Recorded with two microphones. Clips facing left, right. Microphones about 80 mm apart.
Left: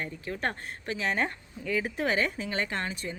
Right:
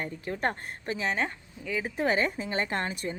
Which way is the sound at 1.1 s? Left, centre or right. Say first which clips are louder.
Left 1 dB; centre.